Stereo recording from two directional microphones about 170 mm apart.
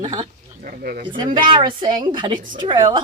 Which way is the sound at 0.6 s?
60° right (ahead or behind).